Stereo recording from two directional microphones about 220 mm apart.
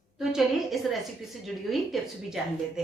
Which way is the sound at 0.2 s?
Centre (ahead or behind).